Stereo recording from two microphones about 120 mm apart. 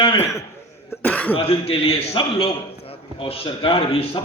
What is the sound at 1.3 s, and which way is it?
A man's voice, 50° left (ahead or behind).